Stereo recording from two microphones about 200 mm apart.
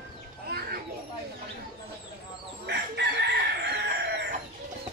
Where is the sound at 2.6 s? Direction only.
55° right (ahead or behind).